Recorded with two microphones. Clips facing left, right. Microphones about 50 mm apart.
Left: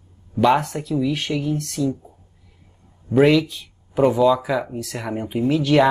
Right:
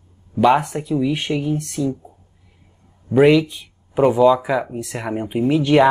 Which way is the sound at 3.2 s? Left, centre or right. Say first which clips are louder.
Right 4 dB; centre.